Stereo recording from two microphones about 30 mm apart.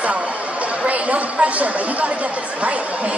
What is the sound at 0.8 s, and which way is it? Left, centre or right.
Speech, right.